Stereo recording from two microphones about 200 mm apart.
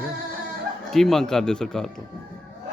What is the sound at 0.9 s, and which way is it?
Speech, centre (ahead or behind).